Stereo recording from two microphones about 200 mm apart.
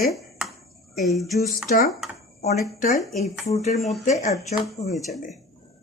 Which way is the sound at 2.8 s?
40° left (ahead or behind).